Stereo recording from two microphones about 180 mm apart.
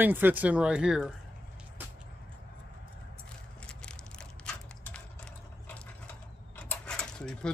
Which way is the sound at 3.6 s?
5° left (ahead or behind).